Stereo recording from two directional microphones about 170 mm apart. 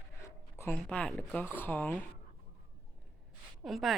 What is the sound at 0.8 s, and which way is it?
Speech, 5° left (ahead or behind).